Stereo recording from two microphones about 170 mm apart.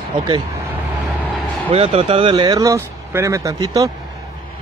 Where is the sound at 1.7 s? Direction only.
35° right (ahead or behind); by 3.8 s 20° right (ahead or behind).